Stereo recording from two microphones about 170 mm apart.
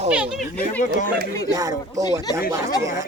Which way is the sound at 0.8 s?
45° left (ahead or behind).